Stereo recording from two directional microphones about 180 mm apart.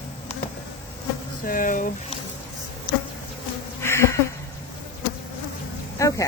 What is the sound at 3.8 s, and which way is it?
Insect, 15° left (ahead or behind).